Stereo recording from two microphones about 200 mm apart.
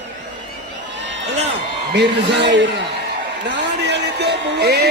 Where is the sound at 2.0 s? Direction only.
60° right (ahead or behind).